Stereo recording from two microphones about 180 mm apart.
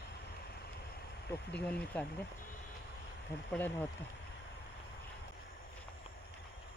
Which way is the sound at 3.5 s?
10° left (ahead or behind).